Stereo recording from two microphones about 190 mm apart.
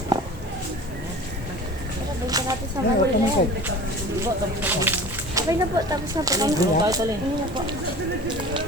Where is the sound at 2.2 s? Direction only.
20° right (ahead or behind).